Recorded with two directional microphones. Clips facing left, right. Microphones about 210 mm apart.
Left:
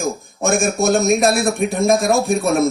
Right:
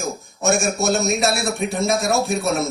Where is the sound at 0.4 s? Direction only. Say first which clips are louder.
Left 3 dB; 55° left (ahead or behind).